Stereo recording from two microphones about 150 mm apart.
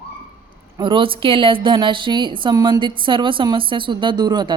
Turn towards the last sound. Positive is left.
turn(degrees=-30)  # may be behind; listen again after turning